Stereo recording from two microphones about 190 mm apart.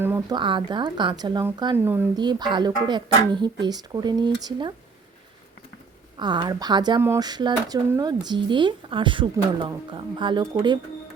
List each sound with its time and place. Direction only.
0.0 s a sound: 10° right (ahead or behind)
0.3 s speech: 25° right (ahead or behind)
2.1 s speech: 20° right (ahead or behind)
6.1 s speech: 25° right (ahead or behind)